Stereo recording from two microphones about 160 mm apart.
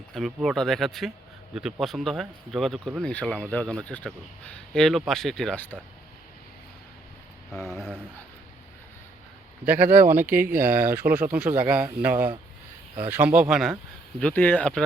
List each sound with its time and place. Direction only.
0.1 s speech: centre (ahead or behind)
7.7 s a sound: 5° right (ahead or behind)
9.6 s speech: 10° right (ahead or behind); by 14.8 s 5° left (ahead or behind)